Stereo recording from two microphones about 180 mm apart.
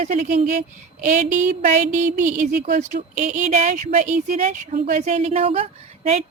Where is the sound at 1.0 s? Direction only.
45° right (ahead or behind).